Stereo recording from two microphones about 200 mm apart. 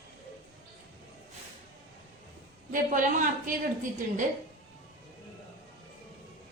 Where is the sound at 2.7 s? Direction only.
40° right (ahead or behind).